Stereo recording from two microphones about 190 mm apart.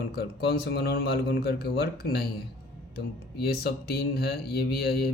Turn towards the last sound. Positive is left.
turn(degrees=55)  # may be behind; listen again after turning